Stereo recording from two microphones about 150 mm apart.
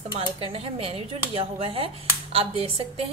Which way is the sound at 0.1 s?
40° right (ahead or behind).